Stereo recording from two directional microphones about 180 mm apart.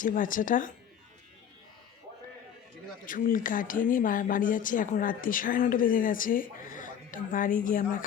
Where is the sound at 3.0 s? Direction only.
50° left (ahead or behind).